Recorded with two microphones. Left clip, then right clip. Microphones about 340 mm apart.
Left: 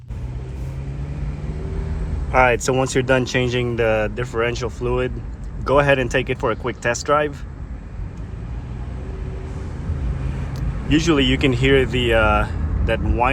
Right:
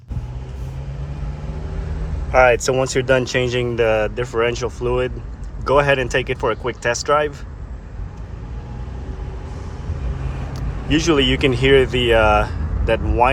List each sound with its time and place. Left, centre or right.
2.3 s speech: centre
10.8 s speech: centre